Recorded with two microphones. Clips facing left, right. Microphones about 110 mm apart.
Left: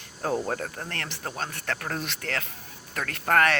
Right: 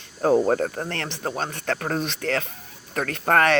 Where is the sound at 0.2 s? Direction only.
40° right (ahead or behind).